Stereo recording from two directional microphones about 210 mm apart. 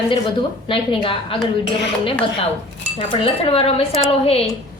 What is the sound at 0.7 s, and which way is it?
Speech, 25° left (ahead or behind).